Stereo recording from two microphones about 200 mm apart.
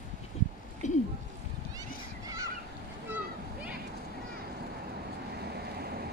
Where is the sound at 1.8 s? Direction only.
20° right (ahead or behind).